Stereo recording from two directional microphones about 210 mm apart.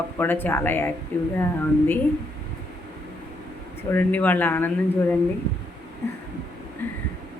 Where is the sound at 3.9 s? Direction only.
10° left (ahead or behind).